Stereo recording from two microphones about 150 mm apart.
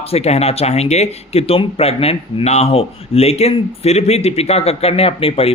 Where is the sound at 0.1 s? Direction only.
45° left (ahead or behind).